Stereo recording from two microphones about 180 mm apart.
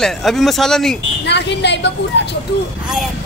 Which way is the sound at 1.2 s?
70° left (ahead or behind).